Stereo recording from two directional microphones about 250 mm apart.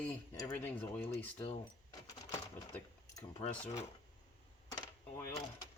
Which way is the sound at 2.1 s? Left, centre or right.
Centre.